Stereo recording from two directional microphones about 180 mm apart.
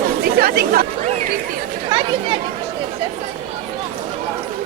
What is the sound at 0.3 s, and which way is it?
Speech, 55° right (ahead or behind).